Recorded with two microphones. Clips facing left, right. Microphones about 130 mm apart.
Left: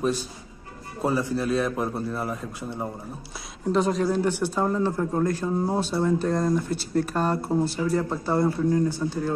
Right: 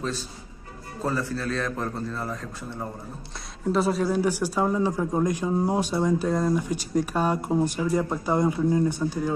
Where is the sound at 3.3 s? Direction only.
Centre (ahead or behind).